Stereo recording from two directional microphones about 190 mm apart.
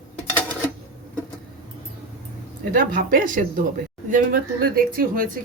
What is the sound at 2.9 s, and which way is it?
Speech, 45° right (ahead or behind).